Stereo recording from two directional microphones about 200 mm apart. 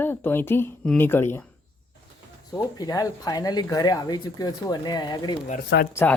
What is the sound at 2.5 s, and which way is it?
Speech, 15° left (ahead or behind).